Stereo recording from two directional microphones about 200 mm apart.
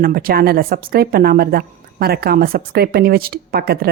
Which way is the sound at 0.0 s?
45° right (ahead or behind).